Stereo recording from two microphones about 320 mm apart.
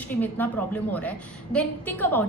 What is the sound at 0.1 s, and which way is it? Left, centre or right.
Speech, centre.